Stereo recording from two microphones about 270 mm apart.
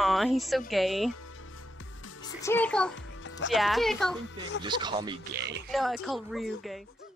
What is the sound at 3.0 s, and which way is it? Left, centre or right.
Music, left.